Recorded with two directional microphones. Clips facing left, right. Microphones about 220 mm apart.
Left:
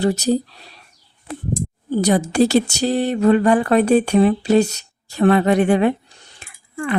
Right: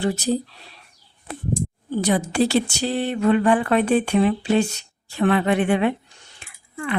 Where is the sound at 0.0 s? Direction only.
40° left (ahead or behind).